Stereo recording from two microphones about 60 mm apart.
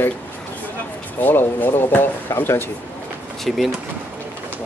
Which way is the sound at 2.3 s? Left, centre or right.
Left.